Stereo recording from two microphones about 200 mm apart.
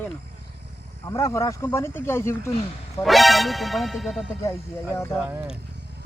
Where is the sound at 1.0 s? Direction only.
15° left (ahead or behind).